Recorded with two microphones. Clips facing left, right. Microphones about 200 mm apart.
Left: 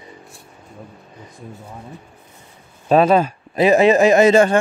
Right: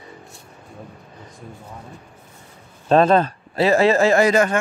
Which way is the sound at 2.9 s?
10° left (ahead or behind).